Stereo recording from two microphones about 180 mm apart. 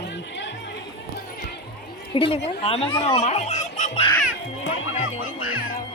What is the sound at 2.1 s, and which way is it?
A woman's voice, 30° left (ahead or behind).